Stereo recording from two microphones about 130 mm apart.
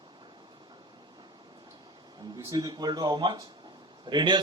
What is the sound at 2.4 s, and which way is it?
Speech, 30° right (ahead or behind).